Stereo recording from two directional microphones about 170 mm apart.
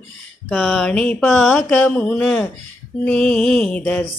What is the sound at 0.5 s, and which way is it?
Speech, centre (ahead or behind).